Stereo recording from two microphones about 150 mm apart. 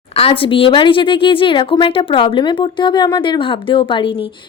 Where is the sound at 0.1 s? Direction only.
40° left (ahead or behind).